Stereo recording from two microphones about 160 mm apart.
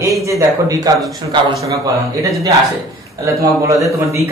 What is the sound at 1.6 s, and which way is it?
A man's voice, 20° right (ahead or behind).